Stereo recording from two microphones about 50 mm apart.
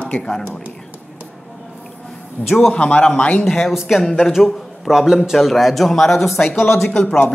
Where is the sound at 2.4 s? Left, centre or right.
Left.